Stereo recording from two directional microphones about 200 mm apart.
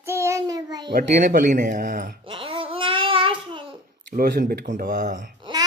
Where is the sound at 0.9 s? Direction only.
40° right (ahead or behind).